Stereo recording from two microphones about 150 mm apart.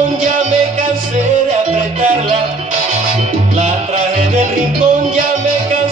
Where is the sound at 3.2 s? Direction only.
50° right (ahead or behind).